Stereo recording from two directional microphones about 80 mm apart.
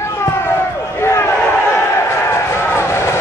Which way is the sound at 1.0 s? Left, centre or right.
Left.